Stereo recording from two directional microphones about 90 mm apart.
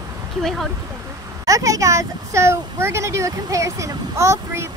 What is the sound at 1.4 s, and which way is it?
Speech, 35° right (ahead or behind).